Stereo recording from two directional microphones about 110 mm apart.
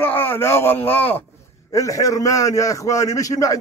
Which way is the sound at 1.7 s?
30° left (ahead or behind).